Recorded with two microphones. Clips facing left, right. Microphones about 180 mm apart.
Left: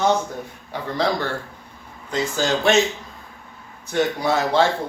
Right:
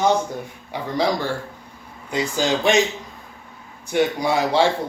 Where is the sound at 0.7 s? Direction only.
10° right (ahead or behind).